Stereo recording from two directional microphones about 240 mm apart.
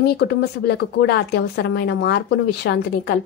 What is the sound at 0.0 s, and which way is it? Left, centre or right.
A woman's voice, left.